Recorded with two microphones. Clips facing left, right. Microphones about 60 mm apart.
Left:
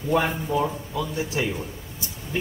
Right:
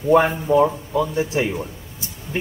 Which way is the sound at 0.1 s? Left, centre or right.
Right.